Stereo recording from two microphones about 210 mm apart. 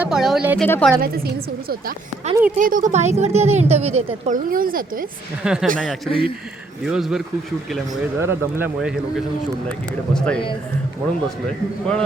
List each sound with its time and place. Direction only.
0.0 s a man's voice: centre (ahead or behind)
1.0 s speech: 45° right (ahead or behind)
2.6 s a woman's voice: 40° right (ahead or behind)
4.4 s speech: 40° right (ahead or behind)
5.4 s a man's voice: 5° right (ahead or behind)
5.6 s a woman's voice: 40° right (ahead or behind)
6.1 s speech: 25° left (ahead or behind)
6.8 s a man's voice: 5° right (ahead or behind)
8.2 s a man's voice: 10° right (ahead or behind)
10.2 s a man's voice: 5° left (ahead or behind)
11.4 s a man's voice: 5° left (ahead or behind)